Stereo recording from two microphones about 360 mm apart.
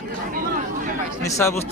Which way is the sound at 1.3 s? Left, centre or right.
Centre.